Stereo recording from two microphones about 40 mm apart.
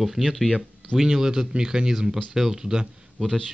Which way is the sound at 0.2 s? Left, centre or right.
Centre.